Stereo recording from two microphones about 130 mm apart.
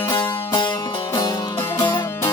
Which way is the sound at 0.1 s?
35° left (ahead or behind).